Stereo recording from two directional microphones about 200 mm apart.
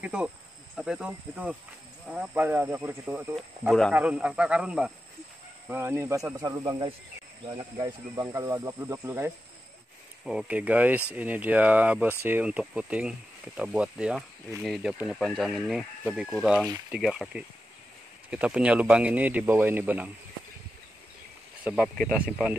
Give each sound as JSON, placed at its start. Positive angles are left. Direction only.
{"t": 0.0, "sound": "speech", "side_deg": -5}
{"t": 21.6, "sound": "speech", "side_deg": -5}